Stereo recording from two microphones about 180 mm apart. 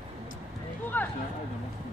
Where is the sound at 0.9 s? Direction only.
10° left (ahead or behind).